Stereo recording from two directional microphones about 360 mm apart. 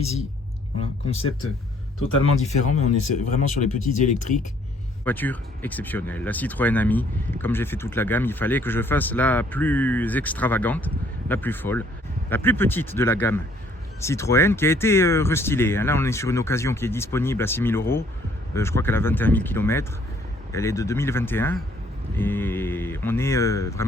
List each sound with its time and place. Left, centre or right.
0.8 s speech: centre
2.4 s speech: centre
5.0 s speech: centre